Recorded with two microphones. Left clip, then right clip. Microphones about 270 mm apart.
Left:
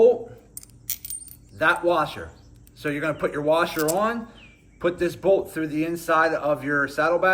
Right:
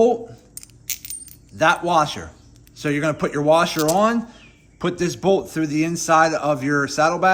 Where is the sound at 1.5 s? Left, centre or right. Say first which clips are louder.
Right 4 dB; right.